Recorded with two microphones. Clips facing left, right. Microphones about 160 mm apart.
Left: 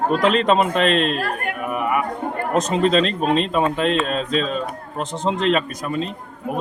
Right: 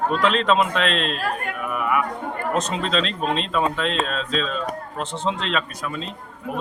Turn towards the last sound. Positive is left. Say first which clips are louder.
# left 5 dB
turn(degrees=45)  # may be behind; listen again after turning